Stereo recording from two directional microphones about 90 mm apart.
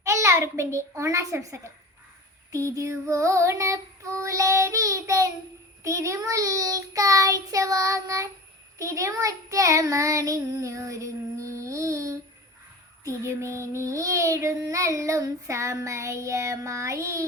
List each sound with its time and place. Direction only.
0.0 s a child's voice: 35° right (ahead or behind)
2.5 s child singing: 35° right (ahead or behind)